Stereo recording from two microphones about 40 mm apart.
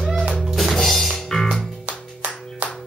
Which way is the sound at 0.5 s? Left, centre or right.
Centre.